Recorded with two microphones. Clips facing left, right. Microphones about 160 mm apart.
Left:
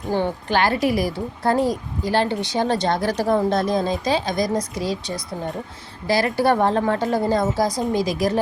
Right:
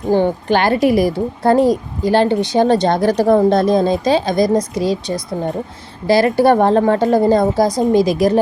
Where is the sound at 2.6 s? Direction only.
20° right (ahead or behind).